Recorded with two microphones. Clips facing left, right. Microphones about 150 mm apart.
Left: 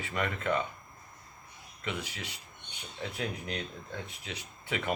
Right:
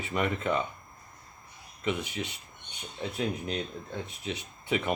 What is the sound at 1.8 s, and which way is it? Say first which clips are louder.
Speech: right 6 dB; 20° right (ahead or behind).